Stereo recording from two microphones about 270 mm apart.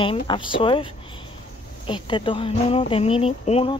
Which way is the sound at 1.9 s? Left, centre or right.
Centre.